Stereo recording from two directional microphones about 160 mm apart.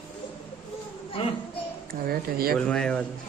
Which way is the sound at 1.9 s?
70° right (ahead or behind).